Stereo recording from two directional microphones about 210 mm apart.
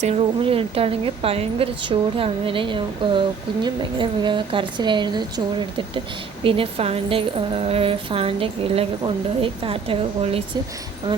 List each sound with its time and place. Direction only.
0.0 s a woman's voice: 30° right (ahead or behind)